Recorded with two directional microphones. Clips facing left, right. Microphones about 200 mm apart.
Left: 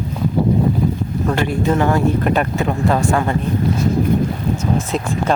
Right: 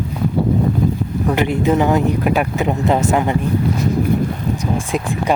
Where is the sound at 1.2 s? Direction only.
15° right (ahead or behind).